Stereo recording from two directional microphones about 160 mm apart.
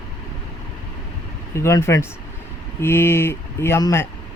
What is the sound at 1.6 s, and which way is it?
Speech, 15° left (ahead or behind).